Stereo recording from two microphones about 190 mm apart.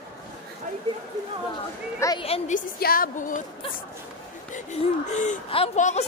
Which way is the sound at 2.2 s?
35° left (ahead or behind).